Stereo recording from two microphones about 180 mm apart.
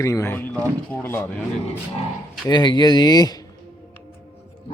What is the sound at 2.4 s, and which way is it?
Speech, 25° left (ahead or behind).